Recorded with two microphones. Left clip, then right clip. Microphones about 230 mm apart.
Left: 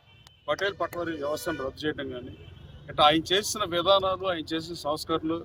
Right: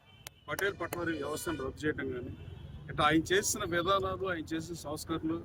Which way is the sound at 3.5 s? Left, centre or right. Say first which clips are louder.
Left 5 dB; left.